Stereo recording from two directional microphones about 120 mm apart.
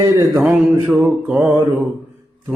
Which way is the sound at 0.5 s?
15° right (ahead or behind).